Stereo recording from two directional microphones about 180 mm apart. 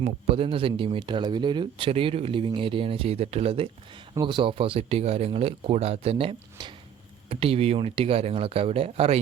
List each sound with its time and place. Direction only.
0.0 s speech: 30° right (ahead or behind)